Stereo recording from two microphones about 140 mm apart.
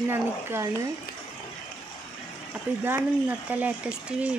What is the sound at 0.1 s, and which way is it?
Speech, 15° right (ahead or behind).